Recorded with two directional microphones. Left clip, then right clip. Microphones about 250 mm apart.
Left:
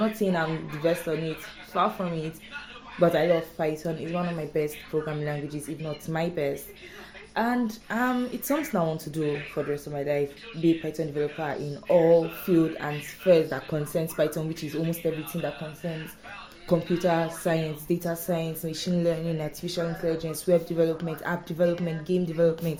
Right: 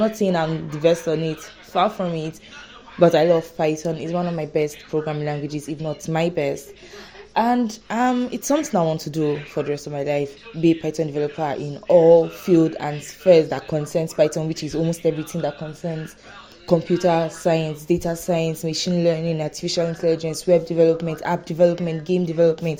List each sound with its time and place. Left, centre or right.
0.2 s a woman's voice: right
16.6 s a woman's voice: right